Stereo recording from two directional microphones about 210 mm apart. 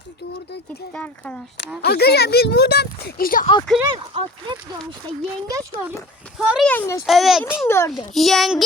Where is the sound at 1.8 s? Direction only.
50° left (ahead or behind).